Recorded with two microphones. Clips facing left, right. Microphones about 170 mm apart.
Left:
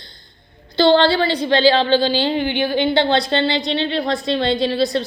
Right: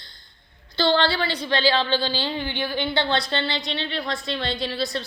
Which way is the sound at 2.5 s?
20° left (ahead or behind).